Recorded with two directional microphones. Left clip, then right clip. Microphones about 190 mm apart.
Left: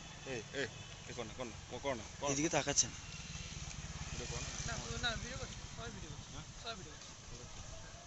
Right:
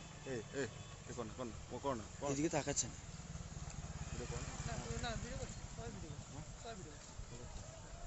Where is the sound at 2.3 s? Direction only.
Centre (ahead or behind).